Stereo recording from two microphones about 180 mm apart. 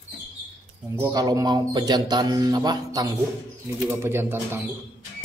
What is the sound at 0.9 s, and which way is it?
Speech, 20° right (ahead or behind).